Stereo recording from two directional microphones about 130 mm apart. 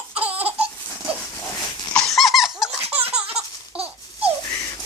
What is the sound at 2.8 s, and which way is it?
Laughter, 50° right (ahead or behind).